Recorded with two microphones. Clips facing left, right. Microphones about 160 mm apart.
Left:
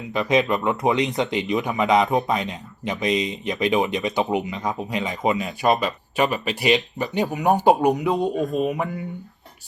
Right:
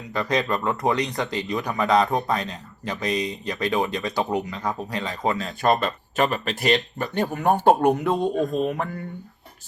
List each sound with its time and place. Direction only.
0.1 s speech: 20° left (ahead or behind)
5.6 s speech: 5° left (ahead or behind)
7.1 s speech: 15° left (ahead or behind)
7.9 s speech: centre (ahead or behind)